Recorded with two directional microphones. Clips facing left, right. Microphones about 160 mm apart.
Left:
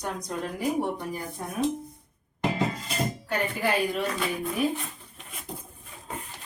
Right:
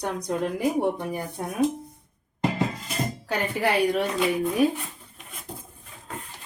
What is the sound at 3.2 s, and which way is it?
Speech, 90° right.